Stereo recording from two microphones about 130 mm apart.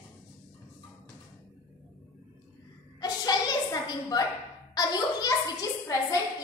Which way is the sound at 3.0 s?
30° left (ahead or behind).